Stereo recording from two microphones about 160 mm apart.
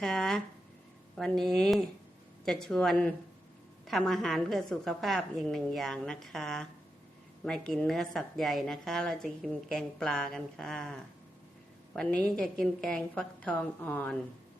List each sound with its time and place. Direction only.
0.0 s a woman's voice: 5° left (ahead or behind)
11.9 s a woman's voice: 5° left (ahead or behind)